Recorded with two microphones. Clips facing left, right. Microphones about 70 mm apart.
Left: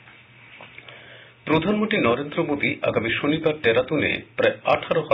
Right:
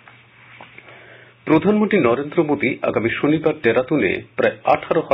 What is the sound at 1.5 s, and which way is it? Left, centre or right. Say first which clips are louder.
Speech: right 6 dB; right.